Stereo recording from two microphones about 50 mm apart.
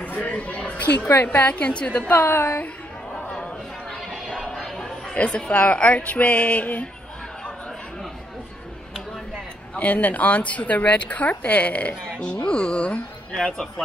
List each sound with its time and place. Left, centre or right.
0.0 s a sound: left
1.2 s a woman's voice: left
1.5 s a woman's voice: left
2.1 s a woman's voice: left
4.1 s a sound: centre
5.1 s a woman's voice: left
9.8 s a woman's voice: left